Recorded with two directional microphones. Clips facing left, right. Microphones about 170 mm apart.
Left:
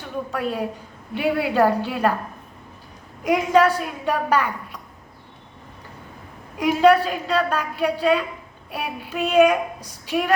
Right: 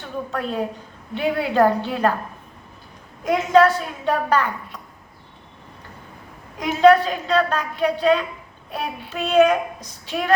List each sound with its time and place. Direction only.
0.3 s a woman's voice: 10° left (ahead or behind)
3.2 s a woman's voice: 10° left (ahead or behind)
6.6 s a woman's voice: 10° left (ahead or behind)